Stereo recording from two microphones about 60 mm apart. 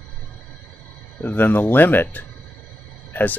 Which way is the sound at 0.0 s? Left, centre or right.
Left.